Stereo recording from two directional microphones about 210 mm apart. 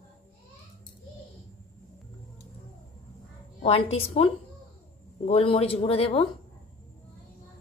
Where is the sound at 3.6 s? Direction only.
30° left (ahead or behind).